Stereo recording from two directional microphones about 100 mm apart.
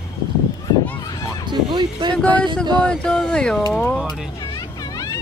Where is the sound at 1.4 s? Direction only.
50° right (ahead or behind).